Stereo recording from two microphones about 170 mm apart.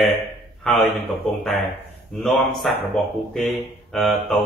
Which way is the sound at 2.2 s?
Centre (ahead or behind).